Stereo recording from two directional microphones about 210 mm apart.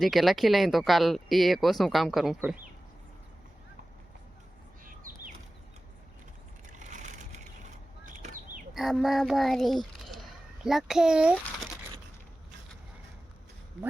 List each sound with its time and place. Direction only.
0.0 s speech: centre (ahead or behind)
4.9 s bird: 40° right (ahead or behind)
6.7 s a sound: 35° right (ahead or behind)
8.7 s speech: centre (ahead or behind)